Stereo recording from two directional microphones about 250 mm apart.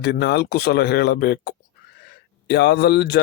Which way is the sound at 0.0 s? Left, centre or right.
Left.